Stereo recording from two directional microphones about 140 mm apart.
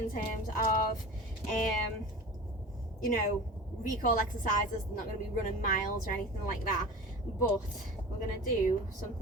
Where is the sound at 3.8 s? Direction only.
70° left (ahead or behind).